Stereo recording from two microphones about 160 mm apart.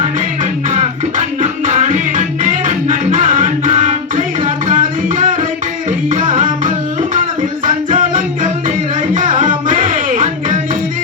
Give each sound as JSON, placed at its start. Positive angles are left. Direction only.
{"t": 0.7, "sound": "music", "side_deg": -50}